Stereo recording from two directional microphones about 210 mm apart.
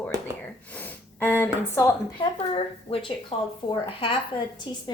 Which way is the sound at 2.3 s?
25° left (ahead or behind).